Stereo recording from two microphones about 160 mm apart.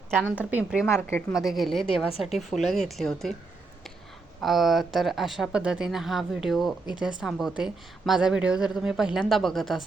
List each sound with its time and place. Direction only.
0.2 s a woman's voice: 10° right (ahead or behind)
0.9 s a woman's voice: 15° left (ahead or behind)
1.5 s a woman's voice: centre (ahead or behind)
4.4 s a woman's voice: centre (ahead or behind)